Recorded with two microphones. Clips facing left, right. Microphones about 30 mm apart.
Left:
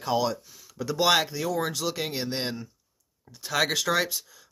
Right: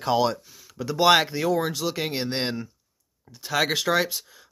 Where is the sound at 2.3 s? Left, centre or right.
Right.